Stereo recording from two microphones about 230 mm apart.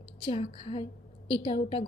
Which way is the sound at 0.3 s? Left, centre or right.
Left.